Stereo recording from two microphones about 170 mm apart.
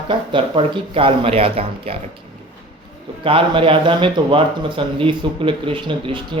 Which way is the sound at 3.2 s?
30° right (ahead or behind).